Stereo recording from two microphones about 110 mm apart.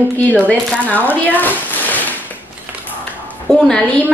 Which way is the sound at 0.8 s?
15° left (ahead or behind).